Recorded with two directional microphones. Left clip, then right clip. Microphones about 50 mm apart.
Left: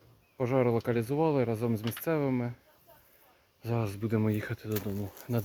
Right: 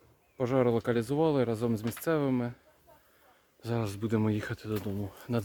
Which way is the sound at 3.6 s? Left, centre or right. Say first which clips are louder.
Even; centre.